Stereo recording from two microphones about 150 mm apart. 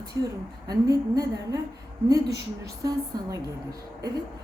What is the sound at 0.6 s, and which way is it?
Speech, 25° right (ahead or behind).